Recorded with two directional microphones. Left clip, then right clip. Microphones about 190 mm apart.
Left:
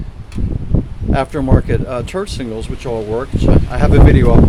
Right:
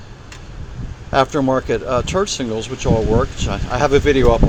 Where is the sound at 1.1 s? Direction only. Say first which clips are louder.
Right 2 dB; 10° left (ahead or behind).